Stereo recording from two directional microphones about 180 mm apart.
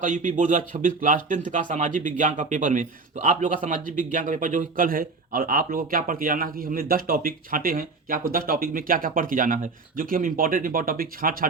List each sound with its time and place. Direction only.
0.0 s a man's voice: 45° right (ahead or behind)